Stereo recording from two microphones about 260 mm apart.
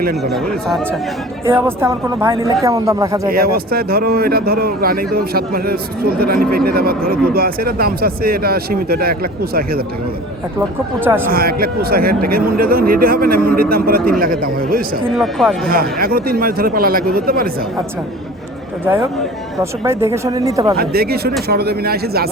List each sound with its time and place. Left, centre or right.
0.2 s speech: centre
3.2 s a man's voice: right
11.0 s speech: centre
11.3 s a man's voice: right
15.1 s speech: centre
15.7 s a man's voice: right
19.8 s speech: centre
20.7 s a man's voice: right